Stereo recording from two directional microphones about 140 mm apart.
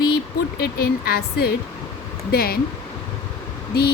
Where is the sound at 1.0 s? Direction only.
90° left.